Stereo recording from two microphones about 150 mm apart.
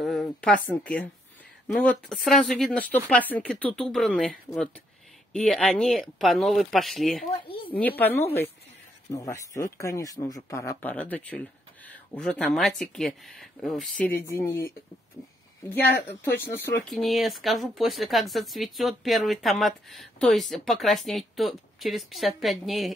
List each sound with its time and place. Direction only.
0.0 s a woman's voice: centre (ahead or behind)
7.2 s speech: 35° left (ahead or behind)
7.6 s a woman's voice: 10° left (ahead or behind)
9.1 s speech: 25° left (ahead or behind); by 14.1 s 5° left (ahead or behind)
14.2 s a woman's voice: 15° left (ahead or behind)
16.9 s speech: centre (ahead or behind)